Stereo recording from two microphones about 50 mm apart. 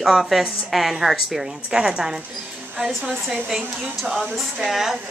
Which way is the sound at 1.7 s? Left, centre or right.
Centre.